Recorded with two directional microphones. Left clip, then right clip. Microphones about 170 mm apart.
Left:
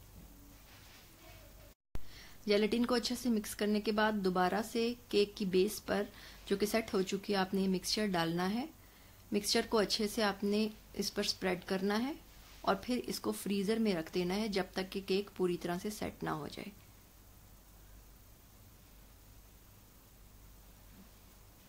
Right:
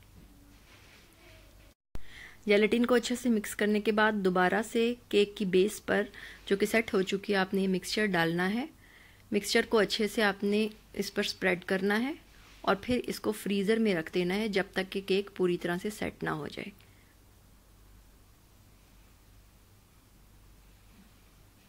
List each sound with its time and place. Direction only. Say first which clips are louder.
2.0 s speech: right 6 dB; 20° right (ahead or behind)